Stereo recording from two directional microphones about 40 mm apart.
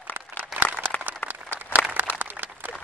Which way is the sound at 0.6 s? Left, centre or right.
Right.